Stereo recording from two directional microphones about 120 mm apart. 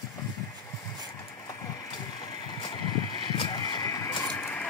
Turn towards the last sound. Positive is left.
turn(degrees=10)  # may be behind; listen again after turning